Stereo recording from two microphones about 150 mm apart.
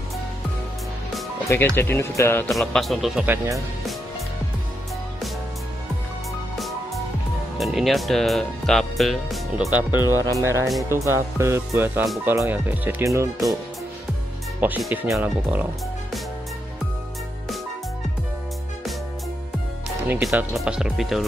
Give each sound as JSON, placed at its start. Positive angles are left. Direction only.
{"t": 1.8, "sound": "speech", "side_deg": 15}
{"t": 2.5, "sound": "speech", "side_deg": 0}
{"t": 3.3, "sound": "speech", "side_deg": -20}
{"t": 7.5, "sound": "speech", "side_deg": 0}
{"t": 9.8, "sound": "speech", "side_deg": -10}
{"t": 10.0, "sound": "speech", "side_deg": 20}
{"t": 10.4, "sound": "speech", "side_deg": -20}
{"t": 14.6, "sound": "speech", "side_deg": -10}
{"t": 20.1, "sound": "speech", "side_deg": -10}